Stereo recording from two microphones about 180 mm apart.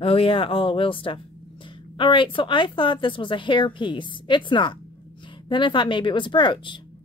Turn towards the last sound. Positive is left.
turn(degrees=25)  # may be behind; listen again after turning